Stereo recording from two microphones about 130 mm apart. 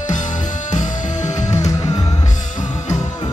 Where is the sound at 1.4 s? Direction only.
25° left (ahead or behind).